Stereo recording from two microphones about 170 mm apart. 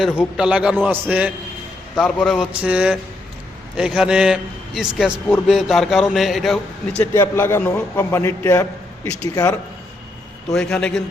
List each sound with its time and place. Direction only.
0.3 s a man's voice: 5° right (ahead or behind)
2.0 s a man's voice: centre (ahead or behind)
7.0 s a man's voice: 15° left (ahead or behind)
10.5 s a man's voice: 5° left (ahead or behind)